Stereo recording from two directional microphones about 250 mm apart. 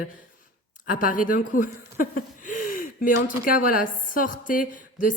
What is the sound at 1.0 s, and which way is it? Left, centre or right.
Speech, left.